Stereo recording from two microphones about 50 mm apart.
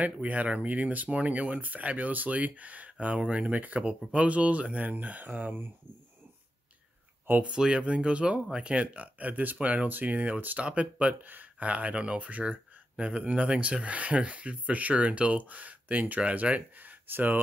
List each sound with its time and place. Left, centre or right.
0.0 s speech: right
7.4 s speech: centre; by 17.4 s right